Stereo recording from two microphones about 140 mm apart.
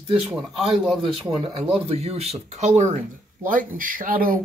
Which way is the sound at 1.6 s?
50° right (ahead or behind).